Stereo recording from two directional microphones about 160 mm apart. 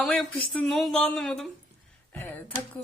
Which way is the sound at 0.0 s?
Centre (ahead or behind).